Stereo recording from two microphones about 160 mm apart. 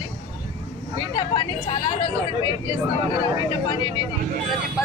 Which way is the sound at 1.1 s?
30° left (ahead or behind).